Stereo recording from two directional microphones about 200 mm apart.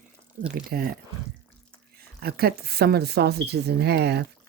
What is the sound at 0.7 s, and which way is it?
Speech, 50° right (ahead or behind).